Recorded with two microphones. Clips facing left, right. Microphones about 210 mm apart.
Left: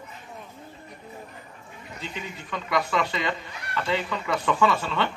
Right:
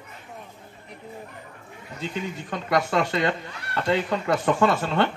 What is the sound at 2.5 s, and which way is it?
Speech, 45° right (ahead or behind).